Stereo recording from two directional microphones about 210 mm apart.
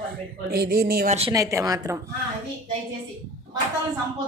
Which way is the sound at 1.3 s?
15° right (ahead or behind).